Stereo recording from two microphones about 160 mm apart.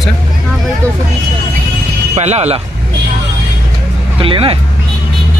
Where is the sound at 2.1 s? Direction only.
45° right (ahead or behind).